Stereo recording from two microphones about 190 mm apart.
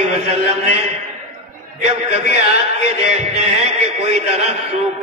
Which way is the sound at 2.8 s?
35° right (ahead or behind).